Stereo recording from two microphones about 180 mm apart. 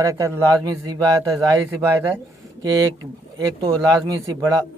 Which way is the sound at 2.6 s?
20° right (ahead or behind).